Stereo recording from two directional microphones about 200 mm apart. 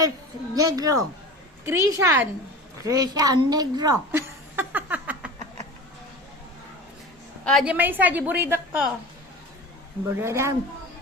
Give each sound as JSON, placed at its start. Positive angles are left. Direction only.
{"t": 0.5, "sound": "a woman's voice", "side_deg": -20}
{"t": 2.8, "sound": "a sound", "side_deg": -20}
{"t": 7.4, "sound": "a woman's voice", "side_deg": 0}
{"t": 10.1, "sound": "a woman's voice", "side_deg": -15}